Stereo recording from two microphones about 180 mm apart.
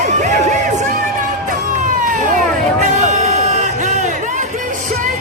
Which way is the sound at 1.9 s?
45° right (ahead or behind).